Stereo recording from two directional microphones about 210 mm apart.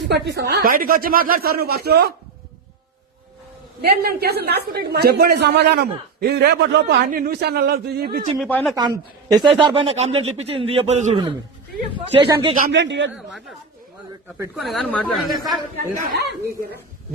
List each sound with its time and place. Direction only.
0.1 s speech: 55° right (ahead or behind)
3.8 s speech: 45° right (ahead or behind)
8.4 s speech: 5° left (ahead or behind)
8.7 s speech: 15° right (ahead or behind)
12.2 s speech: 25° right (ahead or behind)
12.6 s a man's voice: 55° right (ahead or behind)
14.5 s speech: centre (ahead or behind)
16.2 s speech: 50° right (ahead or behind)